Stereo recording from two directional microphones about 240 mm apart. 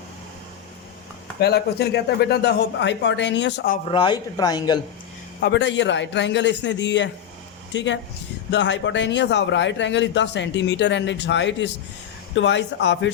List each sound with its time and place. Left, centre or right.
1.4 s a man's voice: left
3.8 s speech: centre
5.4 s a man's voice: left